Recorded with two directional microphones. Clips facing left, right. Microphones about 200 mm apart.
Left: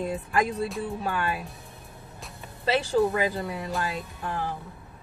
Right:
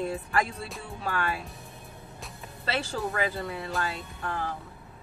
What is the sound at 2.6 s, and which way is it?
A man's voice, 15° left (ahead or behind).